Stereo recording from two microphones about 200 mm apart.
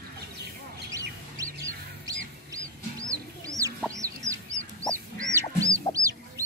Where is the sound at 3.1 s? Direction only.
15° right (ahead or behind).